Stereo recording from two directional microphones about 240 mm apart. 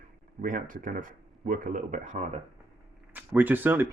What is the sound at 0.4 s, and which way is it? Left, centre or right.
Speech, right.